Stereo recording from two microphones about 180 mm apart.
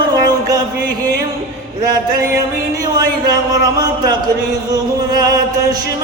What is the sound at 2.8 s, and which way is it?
Speech, 20° right (ahead or behind).